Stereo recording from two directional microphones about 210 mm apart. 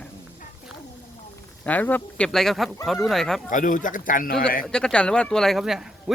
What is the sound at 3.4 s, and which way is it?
Speech, 40° left (ahead or behind).